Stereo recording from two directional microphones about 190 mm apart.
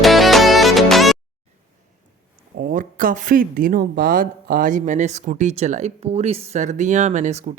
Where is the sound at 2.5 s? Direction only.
45° right (ahead or behind).